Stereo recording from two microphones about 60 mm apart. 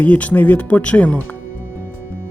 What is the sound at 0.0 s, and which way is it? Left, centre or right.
Speech, left.